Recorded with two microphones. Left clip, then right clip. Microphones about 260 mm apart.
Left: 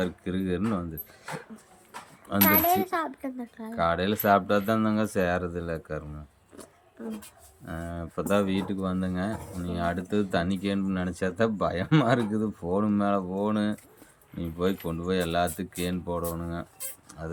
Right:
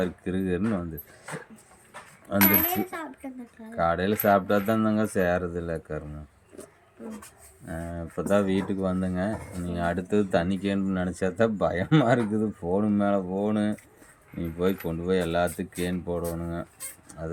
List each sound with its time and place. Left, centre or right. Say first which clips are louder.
0.0 s speech: right 2 dB; centre
2.5 s a child's voice: left 4 dB; centre
3.8 s speech: right 1 dB; centre
7.7 s speech: right 1 dB; centre